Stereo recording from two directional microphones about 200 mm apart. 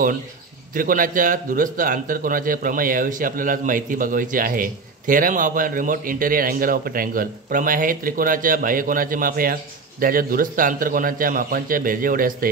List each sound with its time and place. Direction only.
0.7 s a man's voice: 45° right (ahead or behind)